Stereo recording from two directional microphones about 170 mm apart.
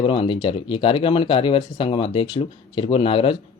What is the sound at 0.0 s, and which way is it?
Speech, 30° left (ahead or behind).